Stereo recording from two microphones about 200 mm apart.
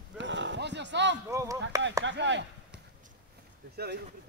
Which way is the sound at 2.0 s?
65° right (ahead or behind).